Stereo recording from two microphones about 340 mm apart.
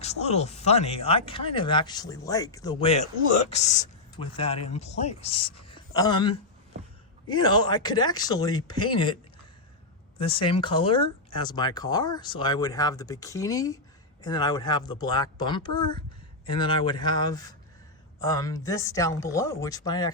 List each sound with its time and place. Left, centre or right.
0.0 s speech: centre
10.2 s speech: centre